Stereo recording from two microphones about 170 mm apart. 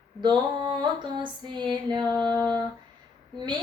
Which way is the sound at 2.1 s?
25° right (ahead or behind).